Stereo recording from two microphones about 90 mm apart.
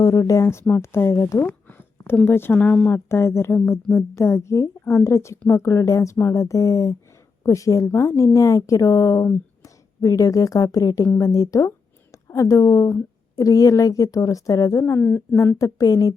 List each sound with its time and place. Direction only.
0.0 s a woman's voice: 45° left (ahead or behind)
1.4 s a sound: 20° left (ahead or behind)
2.2 s speech: 25° left (ahead or behind)
3.1 s a woman's voice: 30° left (ahead or behind)
15.0 s speech: 25° left (ahead or behind)
15.5 s a woman's voice: 40° left (ahead or behind)